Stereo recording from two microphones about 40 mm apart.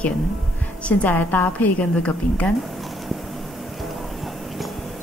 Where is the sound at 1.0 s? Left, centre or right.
Left.